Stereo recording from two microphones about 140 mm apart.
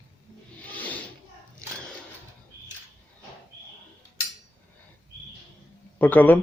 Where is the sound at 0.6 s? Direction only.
10° left (ahead or behind).